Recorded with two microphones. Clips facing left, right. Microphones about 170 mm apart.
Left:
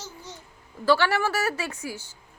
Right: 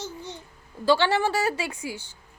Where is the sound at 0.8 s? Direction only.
20° right (ahead or behind).